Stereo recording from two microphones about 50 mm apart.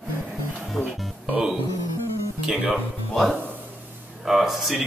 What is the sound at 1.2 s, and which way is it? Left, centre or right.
Music, right.